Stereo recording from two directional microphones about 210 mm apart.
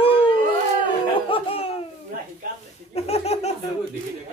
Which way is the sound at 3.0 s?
30° left (ahead or behind).